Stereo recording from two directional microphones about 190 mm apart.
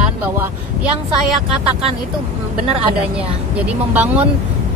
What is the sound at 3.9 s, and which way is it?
Speech, 10° right (ahead or behind).